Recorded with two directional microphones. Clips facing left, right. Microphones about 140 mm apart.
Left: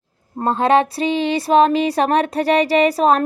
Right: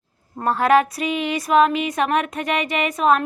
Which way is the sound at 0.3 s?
25° left (ahead or behind).